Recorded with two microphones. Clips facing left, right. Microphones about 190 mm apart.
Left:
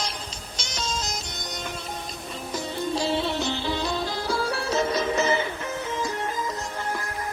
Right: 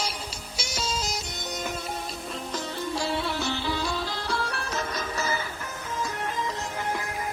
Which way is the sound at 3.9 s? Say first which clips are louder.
Left 3 dB; centre (ahead or behind).